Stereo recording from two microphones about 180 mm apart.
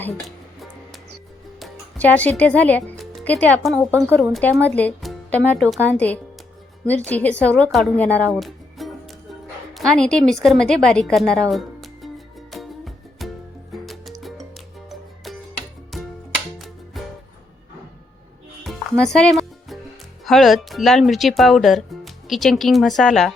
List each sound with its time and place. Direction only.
1.5 s a woman's voice: 5° left (ahead or behind)
8.3 s music: centre (ahead or behind)
9.7 s speech: 5° left (ahead or behind)
10.8 s music: centre (ahead or behind)
18.6 s music: centre (ahead or behind)
20.2 s speech: centre (ahead or behind)